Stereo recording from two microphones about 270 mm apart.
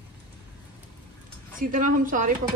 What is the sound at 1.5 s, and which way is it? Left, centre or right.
Speech, right.